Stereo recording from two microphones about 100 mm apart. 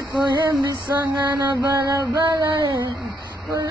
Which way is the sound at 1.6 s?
30° right (ahead or behind).